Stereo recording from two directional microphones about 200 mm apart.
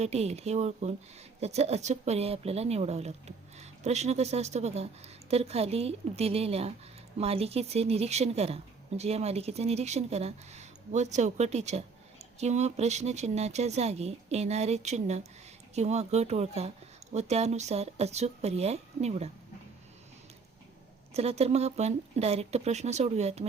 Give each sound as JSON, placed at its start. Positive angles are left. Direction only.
{"t": 0.0, "sound": "speech", "side_deg": -30}
{"t": 21.1, "sound": "speech", "side_deg": -30}